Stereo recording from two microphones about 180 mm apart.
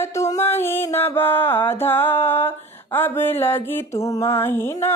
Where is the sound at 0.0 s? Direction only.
15° left (ahead or behind).